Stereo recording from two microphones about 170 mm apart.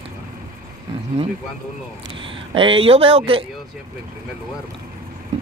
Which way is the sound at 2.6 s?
30° right (ahead or behind).